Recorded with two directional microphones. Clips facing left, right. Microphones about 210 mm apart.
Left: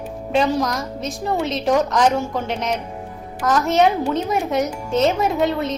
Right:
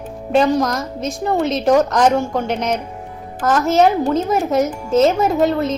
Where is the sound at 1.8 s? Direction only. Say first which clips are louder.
Right 3 dB; 45° right (ahead or behind).